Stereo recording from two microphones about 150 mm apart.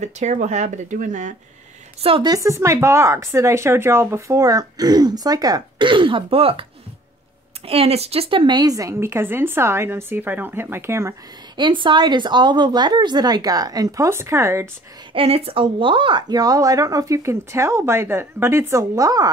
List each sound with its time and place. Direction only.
0.0 s speech: 50° right (ahead or behind)
2.0 s a woman's voice: 35° right (ahead or behind)
2.3 s speech: 20° right (ahead or behind); by 6.6 s 40° right (ahead or behind)
7.6 s speech: 40° right (ahead or behind); by 11.1 s 20° right (ahead or behind)
11.5 s speech: 30° right (ahead or behind)
15.1 s speech: 40° right (ahead or behind); by 19.2 s 25° right (ahead or behind)